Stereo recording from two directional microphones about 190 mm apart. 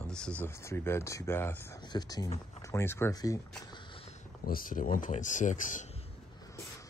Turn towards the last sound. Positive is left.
turn(degrees=40)  # may be behind; listen again after turning